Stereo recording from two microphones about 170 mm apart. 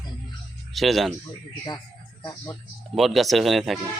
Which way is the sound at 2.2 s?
25° left (ahead or behind).